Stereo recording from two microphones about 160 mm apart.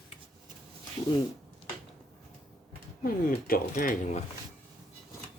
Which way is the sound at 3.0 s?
65° left (ahead or behind).